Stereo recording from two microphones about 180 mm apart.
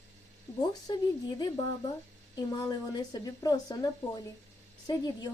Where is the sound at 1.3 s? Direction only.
20° left (ahead or behind).